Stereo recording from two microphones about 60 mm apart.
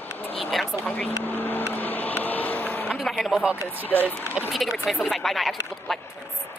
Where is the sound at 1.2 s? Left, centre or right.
Left.